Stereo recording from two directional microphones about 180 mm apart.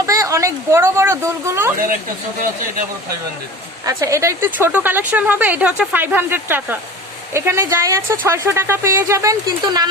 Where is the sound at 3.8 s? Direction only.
15° right (ahead or behind).